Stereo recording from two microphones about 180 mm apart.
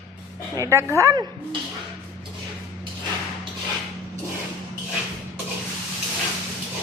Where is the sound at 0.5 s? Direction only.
15° right (ahead or behind).